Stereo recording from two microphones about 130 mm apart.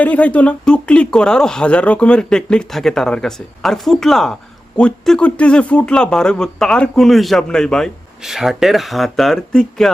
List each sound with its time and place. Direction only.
0.0 s speech: 10° left (ahead or behind)